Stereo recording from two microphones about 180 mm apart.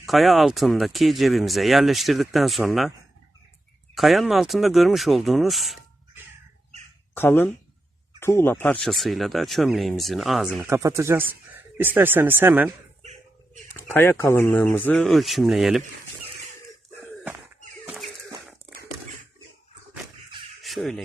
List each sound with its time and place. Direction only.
0.0 s speech: centre (ahead or behind)
3.9 s speech: centre (ahead or behind)
7.1 s speech: 10° left (ahead or behind)
10.6 s speech: 15° right (ahead or behind)
13.0 s a sound: 40° right (ahead or behind)
13.9 s speech: 15° left (ahead or behind); by 15.8 s centre (ahead or behind)
20.6 s crow: centre (ahead or behind)